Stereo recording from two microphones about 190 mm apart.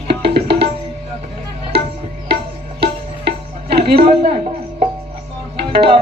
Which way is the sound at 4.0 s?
30° right (ahead or behind).